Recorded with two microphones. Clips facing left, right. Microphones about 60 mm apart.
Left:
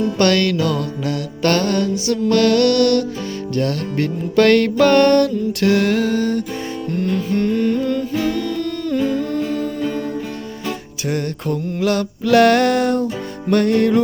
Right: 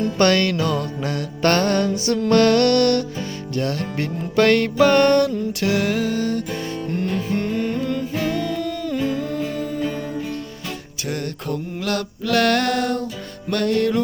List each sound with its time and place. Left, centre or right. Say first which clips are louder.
0.2 s music: left 1 dB; centre
3.5 s music: left 3 dB; centre
6.9 s music: left 4 dB; centre
11.1 s mantra: left 4 dB; centre
13.5 s music: left 4 dB; centre